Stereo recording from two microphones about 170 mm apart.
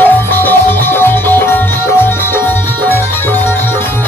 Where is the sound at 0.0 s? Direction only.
10° left (ahead or behind).